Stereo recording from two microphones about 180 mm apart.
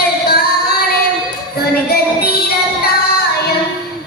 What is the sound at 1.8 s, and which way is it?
Music, 60° left (ahead or behind).